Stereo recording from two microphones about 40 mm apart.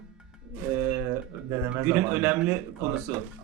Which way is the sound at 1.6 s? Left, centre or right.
Right.